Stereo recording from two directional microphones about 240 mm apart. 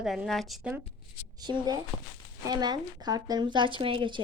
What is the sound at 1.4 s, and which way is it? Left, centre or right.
Speech, centre.